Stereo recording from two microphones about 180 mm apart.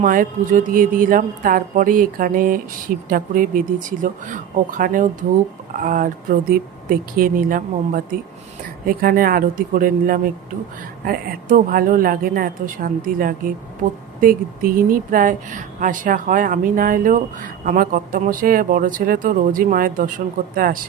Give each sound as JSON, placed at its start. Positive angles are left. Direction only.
{"t": 0.0, "sound": "a woman's voice", "side_deg": -50}